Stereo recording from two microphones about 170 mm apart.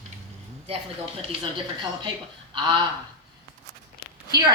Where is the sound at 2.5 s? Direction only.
30° right (ahead or behind).